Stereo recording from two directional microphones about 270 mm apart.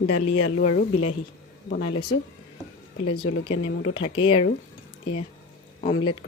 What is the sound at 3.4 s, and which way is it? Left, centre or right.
Speech, left.